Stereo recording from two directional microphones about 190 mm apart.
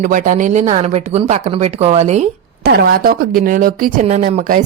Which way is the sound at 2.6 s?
55° right (ahead or behind).